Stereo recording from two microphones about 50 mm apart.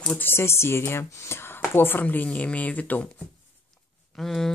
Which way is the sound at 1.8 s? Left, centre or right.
Left.